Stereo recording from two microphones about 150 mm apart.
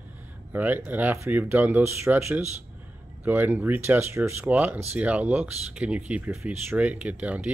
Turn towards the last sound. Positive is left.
turn(degrees=-10)  # may be behind; listen again after turning